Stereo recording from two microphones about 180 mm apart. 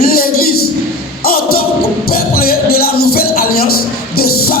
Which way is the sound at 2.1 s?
55° left (ahead or behind).